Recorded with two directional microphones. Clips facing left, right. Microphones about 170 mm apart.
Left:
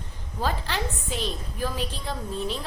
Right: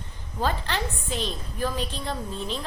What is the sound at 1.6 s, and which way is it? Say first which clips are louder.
Speech: right 2 dB; 10° left (ahead or behind).